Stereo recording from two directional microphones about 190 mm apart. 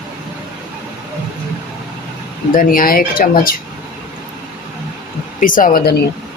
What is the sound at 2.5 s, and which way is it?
Speech, 50° left (ahead or behind).